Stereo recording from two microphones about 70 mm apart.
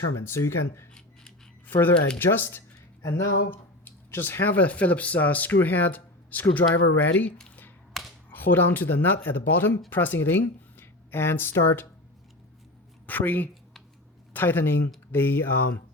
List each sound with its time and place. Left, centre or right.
0.3 s speech: left
1.6 s speech: left
3.5 s speech: left
7.9 s finger snapping: centre
8.3 s speech: left
13.1 s a woman's voice: left